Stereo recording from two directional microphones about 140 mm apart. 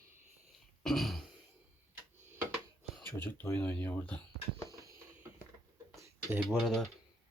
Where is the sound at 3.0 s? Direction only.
20° left (ahead or behind).